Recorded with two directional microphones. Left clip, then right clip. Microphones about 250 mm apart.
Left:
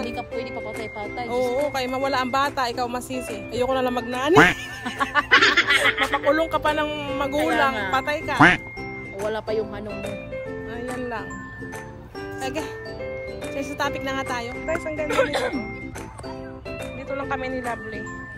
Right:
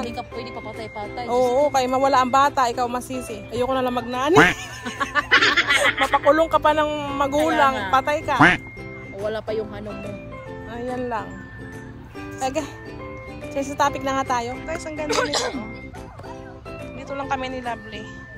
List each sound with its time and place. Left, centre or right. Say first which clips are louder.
0.0 s speech: left 1 dB; centre
1.3 s speech: right 6 dB; centre
4.8 s speech: left 1 dB; left
5.3 s speech: even; centre
9.2 s speech: even; centre
10.8 s speech: right 5 dB; centre
12.4 s speech: right 4 dB; centre
17.1 s speech: right 1 dB; centre